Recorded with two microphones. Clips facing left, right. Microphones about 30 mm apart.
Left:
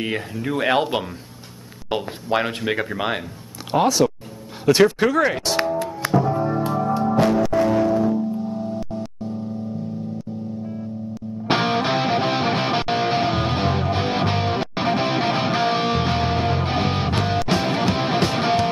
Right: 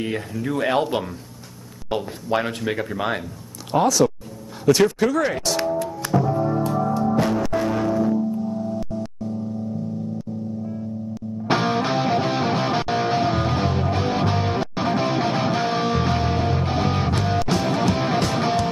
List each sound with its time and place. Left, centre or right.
0.0 s speech: centre
4.6 s music: left
7.6 s music: centre
7.9 s music: left
11.4 s music: left